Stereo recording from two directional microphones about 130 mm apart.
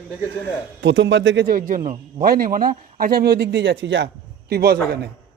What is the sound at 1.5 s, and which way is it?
Speech, 90° right.